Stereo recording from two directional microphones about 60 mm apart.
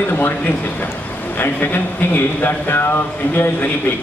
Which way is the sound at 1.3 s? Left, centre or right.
Left.